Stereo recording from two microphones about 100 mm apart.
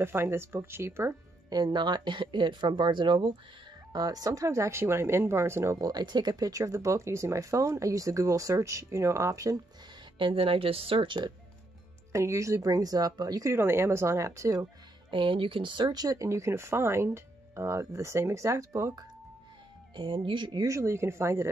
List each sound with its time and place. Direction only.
0.0 s speech: 25° right (ahead or behind)
1.5 s speech: 45° right (ahead or behind)
3.9 s speech: 40° right (ahead or behind)
5.9 s speech: 45° right (ahead or behind)
10.1 s speech: 60° right (ahead or behind)
12.1 s speech: 30° right (ahead or behind)
15.0 s speech: 55° right (ahead or behind); by 19.0 s 30° right (ahead or behind)
20.0 s speech: 60° right (ahead or behind)
20.6 s speech: 30° right (ahead or behind)